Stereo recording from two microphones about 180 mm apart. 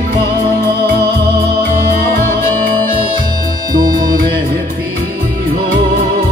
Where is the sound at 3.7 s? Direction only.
20° right (ahead or behind).